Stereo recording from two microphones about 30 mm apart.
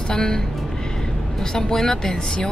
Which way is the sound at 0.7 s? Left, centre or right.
Left.